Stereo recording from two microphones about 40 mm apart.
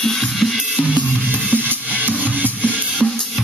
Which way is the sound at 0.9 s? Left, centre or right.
Right.